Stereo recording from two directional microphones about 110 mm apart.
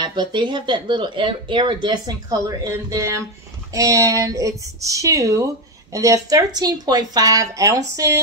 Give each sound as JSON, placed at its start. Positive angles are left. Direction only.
{"t": 0.0, "sound": "speech", "side_deg": -45}